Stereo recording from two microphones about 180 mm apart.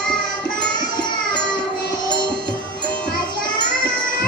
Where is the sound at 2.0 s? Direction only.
25° left (ahead or behind).